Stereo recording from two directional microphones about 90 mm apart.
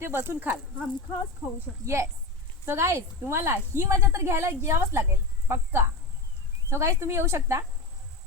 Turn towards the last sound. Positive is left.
turn(degrees=-30)  # may be behind; listen again after turning